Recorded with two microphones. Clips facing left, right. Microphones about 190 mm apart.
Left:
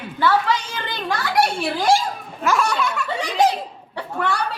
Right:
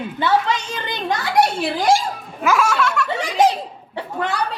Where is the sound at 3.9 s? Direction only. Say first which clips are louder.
Even; 20° right (ahead or behind).